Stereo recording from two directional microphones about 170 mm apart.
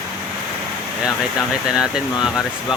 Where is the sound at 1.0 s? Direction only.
5° right (ahead or behind).